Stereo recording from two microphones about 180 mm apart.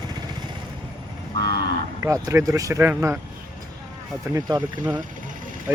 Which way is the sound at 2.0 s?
15° right (ahead or behind).